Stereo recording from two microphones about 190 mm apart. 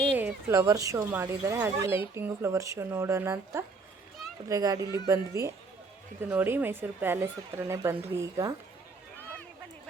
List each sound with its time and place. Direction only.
0.2 s speech: 10° right (ahead or behind)